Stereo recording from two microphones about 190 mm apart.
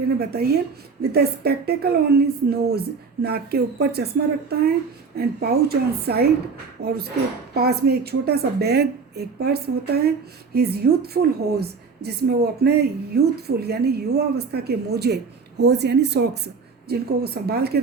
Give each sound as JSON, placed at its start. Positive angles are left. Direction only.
{"t": 0.2, "sound": "a woman's voice", "side_deg": -55}